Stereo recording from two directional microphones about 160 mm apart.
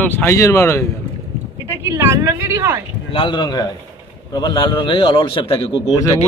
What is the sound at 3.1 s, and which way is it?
A man's voice, 30° left (ahead or behind).